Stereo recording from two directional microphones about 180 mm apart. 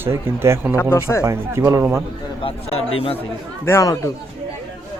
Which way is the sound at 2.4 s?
30° left (ahead or behind).